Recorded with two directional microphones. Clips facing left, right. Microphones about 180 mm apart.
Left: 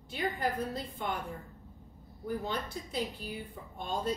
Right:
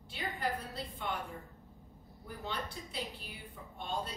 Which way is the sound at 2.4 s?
45° left (ahead or behind).